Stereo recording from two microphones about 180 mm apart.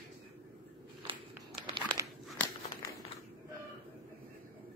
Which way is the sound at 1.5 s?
25° right (ahead or behind).